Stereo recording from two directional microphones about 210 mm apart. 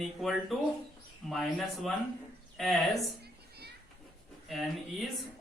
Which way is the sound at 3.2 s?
50° right (ahead or behind).